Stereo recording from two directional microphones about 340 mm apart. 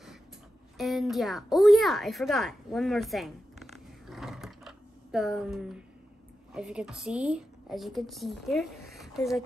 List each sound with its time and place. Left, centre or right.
0.7 s a woman's voice: centre